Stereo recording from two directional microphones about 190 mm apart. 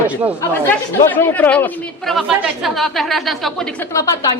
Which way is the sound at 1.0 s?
10° left (ahead or behind).